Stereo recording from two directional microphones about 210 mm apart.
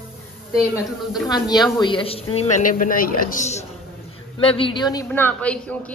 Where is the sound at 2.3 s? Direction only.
40° left (ahead or behind); by 5.0 s 20° left (ahead or behind).